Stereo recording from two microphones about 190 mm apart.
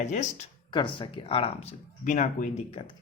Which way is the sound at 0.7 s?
25° left (ahead or behind).